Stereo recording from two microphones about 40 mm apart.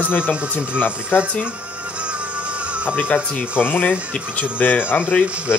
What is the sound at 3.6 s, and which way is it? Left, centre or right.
Speech, left.